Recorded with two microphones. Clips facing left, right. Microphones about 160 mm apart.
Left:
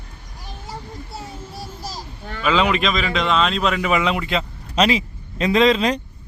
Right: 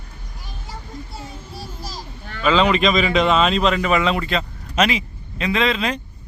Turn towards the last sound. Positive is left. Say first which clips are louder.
# left 5 dB
turn(degrees=40)  # may be behind; listen again after turning